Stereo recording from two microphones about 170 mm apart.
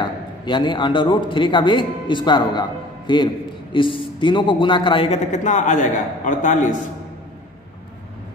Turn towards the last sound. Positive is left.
turn(degrees=50)  # may be behind; listen again after turning